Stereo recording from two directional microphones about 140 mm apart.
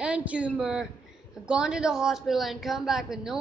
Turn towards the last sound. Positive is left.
turn(degrees=-5)  # may be behind; listen again after turning